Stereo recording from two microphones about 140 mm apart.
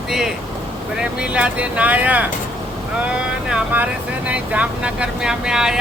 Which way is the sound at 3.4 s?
10° right (ahead or behind).